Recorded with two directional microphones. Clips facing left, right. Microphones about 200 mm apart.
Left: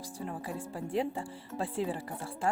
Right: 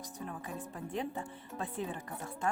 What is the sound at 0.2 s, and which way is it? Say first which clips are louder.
Speech: left 4 dB; 30° left (ahead or behind).